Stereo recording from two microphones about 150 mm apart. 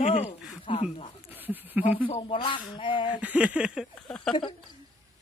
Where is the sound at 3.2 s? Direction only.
10° right (ahead or behind).